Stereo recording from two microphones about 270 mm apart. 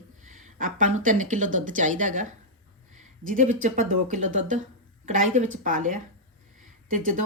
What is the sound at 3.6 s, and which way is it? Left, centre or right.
Speech, right.